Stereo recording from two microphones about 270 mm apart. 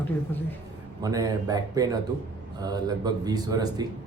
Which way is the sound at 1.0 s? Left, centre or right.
Centre.